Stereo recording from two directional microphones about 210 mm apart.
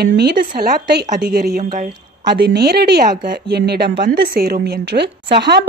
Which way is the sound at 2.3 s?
55° right (ahead or behind).